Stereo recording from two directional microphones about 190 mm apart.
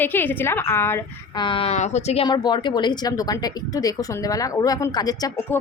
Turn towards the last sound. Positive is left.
turn(degrees=15)  # may be behind; listen again after turning